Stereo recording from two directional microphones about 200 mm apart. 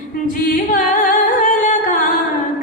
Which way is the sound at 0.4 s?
45° left (ahead or behind).